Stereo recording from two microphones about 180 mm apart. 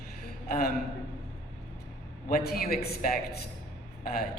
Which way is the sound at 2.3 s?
55° left (ahead or behind).